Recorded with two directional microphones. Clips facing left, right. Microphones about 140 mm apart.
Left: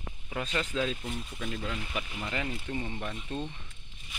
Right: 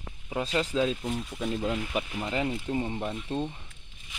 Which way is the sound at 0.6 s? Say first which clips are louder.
Right 5 dB; 25° right (ahead or behind).